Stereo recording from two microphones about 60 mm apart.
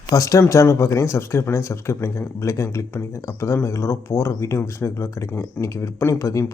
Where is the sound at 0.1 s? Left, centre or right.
Left.